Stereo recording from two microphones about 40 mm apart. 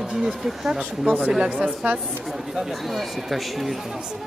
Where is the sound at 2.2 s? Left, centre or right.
Centre.